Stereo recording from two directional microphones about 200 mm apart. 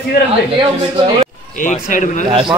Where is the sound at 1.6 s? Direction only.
40° left (ahead or behind).